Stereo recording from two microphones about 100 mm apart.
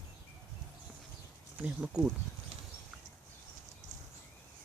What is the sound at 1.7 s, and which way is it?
Speech, 10° right (ahead or behind).